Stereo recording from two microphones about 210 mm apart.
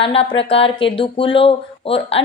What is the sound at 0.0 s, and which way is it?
Speech, 25° left (ahead or behind).